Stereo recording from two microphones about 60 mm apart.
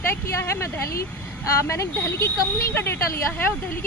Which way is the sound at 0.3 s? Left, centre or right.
Left.